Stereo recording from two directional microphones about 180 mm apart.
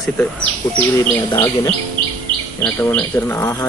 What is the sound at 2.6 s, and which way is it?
Speech, 10° left (ahead or behind).